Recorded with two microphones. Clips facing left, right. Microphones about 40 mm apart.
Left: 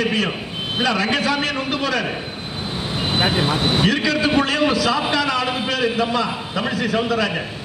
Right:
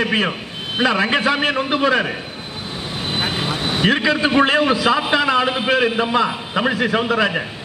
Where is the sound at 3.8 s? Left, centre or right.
Right.